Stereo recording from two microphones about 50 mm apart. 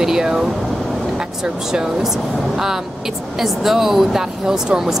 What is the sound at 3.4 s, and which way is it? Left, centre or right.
Speech, centre.